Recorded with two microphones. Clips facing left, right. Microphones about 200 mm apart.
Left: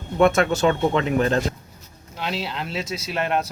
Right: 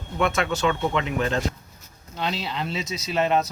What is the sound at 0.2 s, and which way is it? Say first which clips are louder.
Speech: left 6 dB; 45° left (ahead or behind).